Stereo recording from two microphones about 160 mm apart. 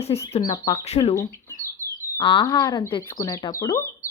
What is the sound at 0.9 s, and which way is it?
Speech, 40° left (ahead or behind).